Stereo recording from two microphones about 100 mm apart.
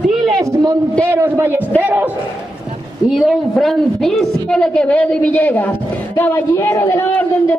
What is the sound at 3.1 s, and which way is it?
A woman's voice, centre (ahead or behind).